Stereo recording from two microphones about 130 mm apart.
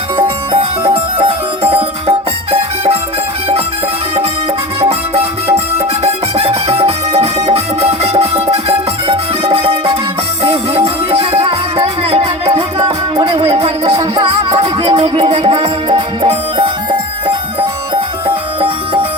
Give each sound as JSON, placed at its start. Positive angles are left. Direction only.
{"t": 0.9, "sound": "music", "side_deg": -50}
{"t": 4.8, "sound": "music", "side_deg": -50}